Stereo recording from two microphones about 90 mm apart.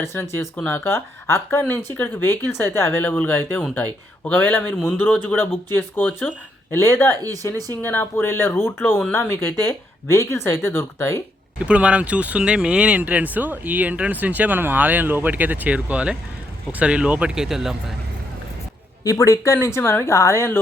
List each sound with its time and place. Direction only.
0.1 s speech: 25° left (ahead or behind)
11.6 s speech: 15° right (ahead or behind)
19.0 s speech: 40° left (ahead or behind)